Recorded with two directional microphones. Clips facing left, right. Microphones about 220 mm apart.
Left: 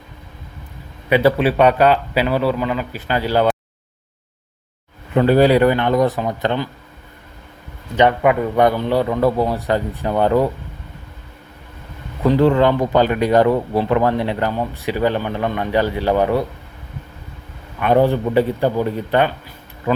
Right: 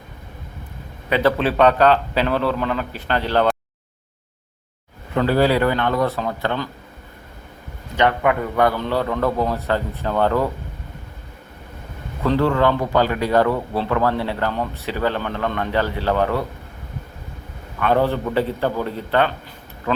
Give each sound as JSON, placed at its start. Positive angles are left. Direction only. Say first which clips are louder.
{"t": 1.1, "sound": "speech", "louder": "left 4 dB", "side_deg": 10}
{"t": 5.1, "sound": "speech", "louder": "left 5 dB", "side_deg": 20}
{"t": 7.9, "sound": "speech", "louder": "left 4 dB", "side_deg": 20}
{"t": 12.2, "sound": "speech", "louder": "left 4 dB", "side_deg": 15}
{"t": 17.7, "sound": "speech", "louder": "left 4 dB", "side_deg": 15}